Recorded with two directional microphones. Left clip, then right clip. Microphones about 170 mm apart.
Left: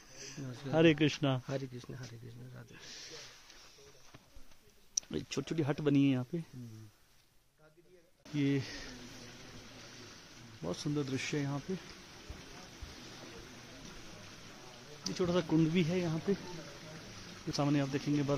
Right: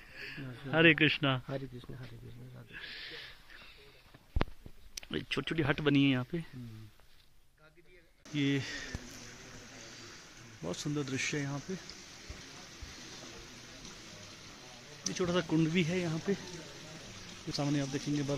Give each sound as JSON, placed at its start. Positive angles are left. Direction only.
{"t": 0.1, "sound": "speech", "side_deg": 20}
{"t": 4.9, "sound": "speech", "side_deg": 0}
{"t": 8.4, "sound": "speech", "side_deg": 0}
{"t": 10.6, "sound": "speech", "side_deg": 0}
{"t": 15.1, "sound": "speech", "side_deg": 0}
{"t": 17.5, "sound": "speech", "side_deg": 5}